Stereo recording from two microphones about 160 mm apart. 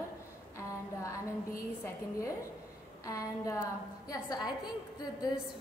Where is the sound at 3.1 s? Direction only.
20° left (ahead or behind).